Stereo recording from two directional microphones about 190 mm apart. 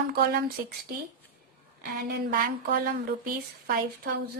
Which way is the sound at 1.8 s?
55° right (ahead or behind).